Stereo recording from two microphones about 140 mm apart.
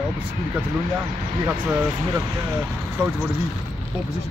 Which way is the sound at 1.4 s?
15° right (ahead or behind).